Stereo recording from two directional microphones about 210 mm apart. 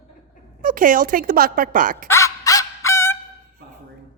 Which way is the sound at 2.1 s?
15° left (ahead or behind).